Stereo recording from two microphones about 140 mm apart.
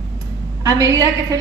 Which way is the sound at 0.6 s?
25° right (ahead or behind).